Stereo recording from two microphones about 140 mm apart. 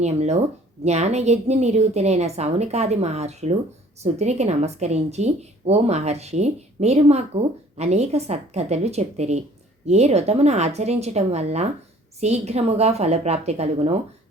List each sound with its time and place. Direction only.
0.0 s a woman's voice: 55° right (ahead or behind)